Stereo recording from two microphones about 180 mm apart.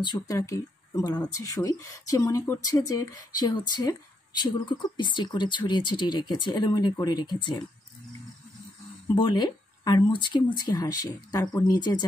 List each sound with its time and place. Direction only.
0.0 s speech: 20° left (ahead or behind)
9.0 s speech: 25° left (ahead or behind)